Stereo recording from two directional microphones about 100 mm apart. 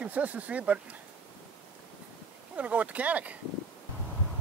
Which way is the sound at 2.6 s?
15° right (ahead or behind).